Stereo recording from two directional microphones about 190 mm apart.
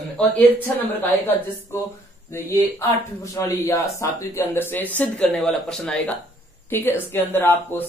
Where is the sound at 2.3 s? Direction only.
15° left (ahead or behind).